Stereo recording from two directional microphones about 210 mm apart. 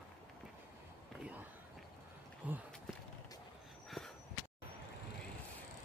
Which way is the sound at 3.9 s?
Centre (ahead or behind).